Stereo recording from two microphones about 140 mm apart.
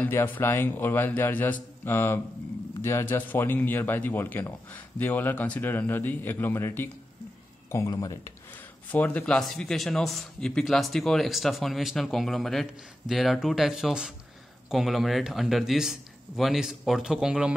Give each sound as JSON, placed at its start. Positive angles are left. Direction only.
{"t": 0.0, "sound": "speech", "side_deg": 15}
{"t": 8.9, "sound": "speech", "side_deg": 10}